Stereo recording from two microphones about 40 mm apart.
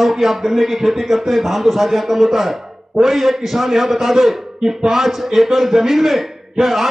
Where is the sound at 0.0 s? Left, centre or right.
Centre.